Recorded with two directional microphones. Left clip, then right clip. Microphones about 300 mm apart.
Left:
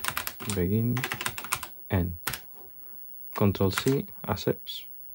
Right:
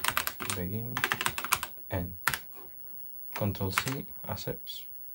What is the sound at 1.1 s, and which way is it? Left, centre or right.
Computer keyboard, centre.